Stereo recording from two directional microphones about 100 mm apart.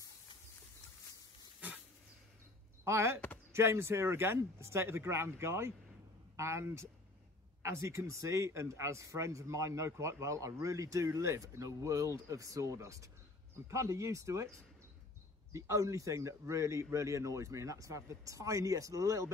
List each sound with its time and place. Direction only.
2.8 s speech: 25° right (ahead or behind)
15.5 s speech: 35° right (ahead or behind)